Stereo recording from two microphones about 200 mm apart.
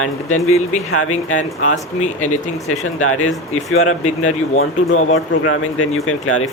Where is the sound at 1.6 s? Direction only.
40° left (ahead or behind).